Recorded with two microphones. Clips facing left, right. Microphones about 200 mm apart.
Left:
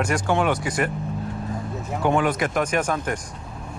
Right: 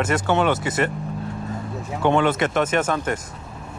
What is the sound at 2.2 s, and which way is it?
Speech, 25° right (ahead or behind).